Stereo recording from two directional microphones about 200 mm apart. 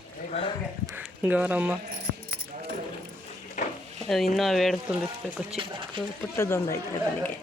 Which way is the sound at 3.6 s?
40° left (ahead or behind).